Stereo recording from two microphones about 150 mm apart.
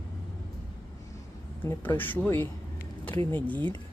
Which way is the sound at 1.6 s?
15° left (ahead or behind).